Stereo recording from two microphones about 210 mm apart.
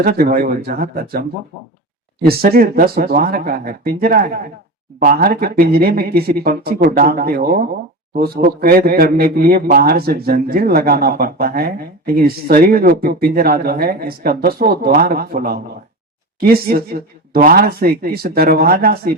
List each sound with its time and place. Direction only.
0.0 s a man's voice: 45° right (ahead or behind)
2.2 s a man's voice: 45° right (ahead or behind)